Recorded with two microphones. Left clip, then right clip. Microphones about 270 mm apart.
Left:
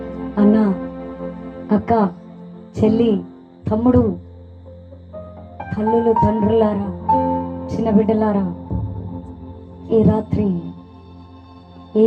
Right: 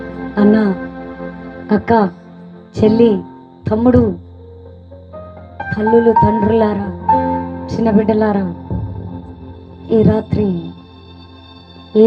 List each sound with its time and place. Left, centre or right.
0.0 s music: right
5.7 s speech: right
9.9 s music: right